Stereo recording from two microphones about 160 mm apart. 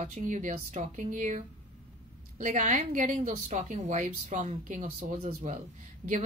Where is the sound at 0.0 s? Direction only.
50° right (ahead or behind).